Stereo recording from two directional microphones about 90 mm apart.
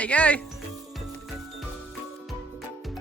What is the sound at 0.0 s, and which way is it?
Speech, 15° left (ahead or behind).